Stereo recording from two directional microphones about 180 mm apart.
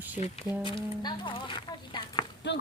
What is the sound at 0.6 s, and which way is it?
Speech, 25° left (ahead or behind).